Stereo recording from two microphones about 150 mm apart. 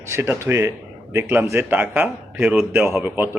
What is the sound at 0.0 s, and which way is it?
A man's voice, 15° right (ahead or behind).